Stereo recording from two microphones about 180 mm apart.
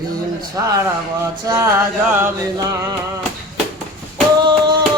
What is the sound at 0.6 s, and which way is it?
Speech, 20° right (ahead or behind).